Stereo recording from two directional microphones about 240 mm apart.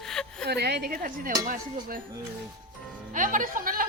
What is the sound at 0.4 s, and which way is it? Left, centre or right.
Speech, right.